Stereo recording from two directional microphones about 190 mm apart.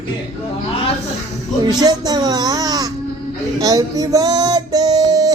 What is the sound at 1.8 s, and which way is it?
Speech, 20° right (ahead or behind).